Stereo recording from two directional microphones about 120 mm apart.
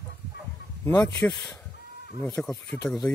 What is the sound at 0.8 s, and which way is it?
Speech, 15° left (ahead or behind).